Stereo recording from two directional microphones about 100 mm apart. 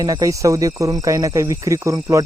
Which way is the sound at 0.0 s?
35° right (ahead or behind).